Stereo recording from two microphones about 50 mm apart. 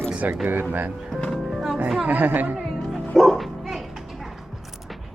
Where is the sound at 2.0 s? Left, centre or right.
Right.